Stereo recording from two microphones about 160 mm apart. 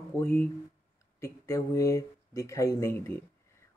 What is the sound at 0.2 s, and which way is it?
Speech, 10° left (ahead or behind).